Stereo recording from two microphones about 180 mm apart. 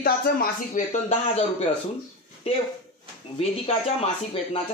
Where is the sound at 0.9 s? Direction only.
40° left (ahead or behind).